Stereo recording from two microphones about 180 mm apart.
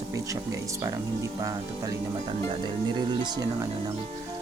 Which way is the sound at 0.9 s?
20° right (ahead or behind).